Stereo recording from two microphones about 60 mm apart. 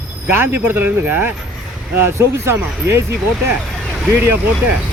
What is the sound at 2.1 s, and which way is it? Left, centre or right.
Speech, right.